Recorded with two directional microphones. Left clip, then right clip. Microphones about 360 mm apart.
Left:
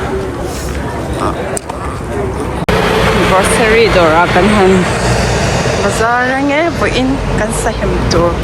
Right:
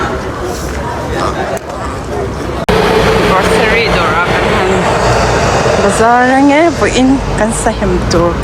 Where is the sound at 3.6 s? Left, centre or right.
Centre.